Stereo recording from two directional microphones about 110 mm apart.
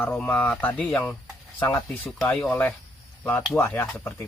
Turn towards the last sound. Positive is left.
turn(degrees=20)  # may be behind; listen again after turning